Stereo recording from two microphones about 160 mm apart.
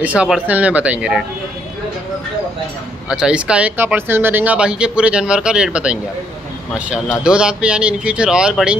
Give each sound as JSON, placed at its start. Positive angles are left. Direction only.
{"t": 0.0, "sound": "speech", "side_deg": -5}
{"t": 3.1, "sound": "speech", "side_deg": -5}